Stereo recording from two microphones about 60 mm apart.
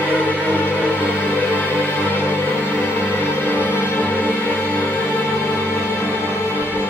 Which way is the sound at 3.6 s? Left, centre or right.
Left.